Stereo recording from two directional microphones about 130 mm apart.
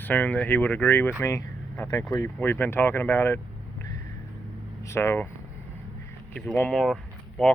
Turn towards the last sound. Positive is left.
turn(degrees=0)  # may be behind; listen again after turning